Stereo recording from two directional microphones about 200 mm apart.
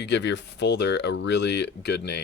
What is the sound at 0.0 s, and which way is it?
Speech, 60° left (ahead or behind).